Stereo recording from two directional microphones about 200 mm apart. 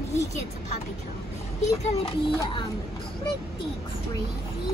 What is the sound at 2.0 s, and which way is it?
Speech, 25° left (ahead or behind).